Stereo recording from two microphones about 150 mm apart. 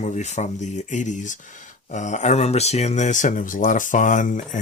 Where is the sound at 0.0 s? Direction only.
50° left (ahead or behind).